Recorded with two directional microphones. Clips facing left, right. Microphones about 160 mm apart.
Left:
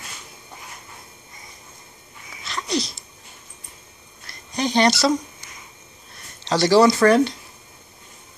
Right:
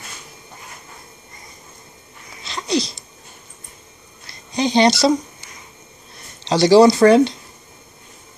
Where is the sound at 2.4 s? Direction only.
30° right (ahead or behind).